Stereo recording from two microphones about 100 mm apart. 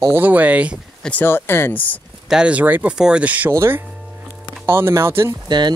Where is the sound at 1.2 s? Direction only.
25° left (ahead or behind).